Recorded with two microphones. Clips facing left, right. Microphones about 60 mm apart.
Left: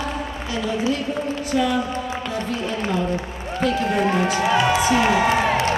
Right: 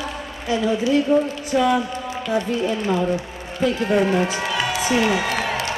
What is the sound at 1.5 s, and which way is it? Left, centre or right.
Speech, right.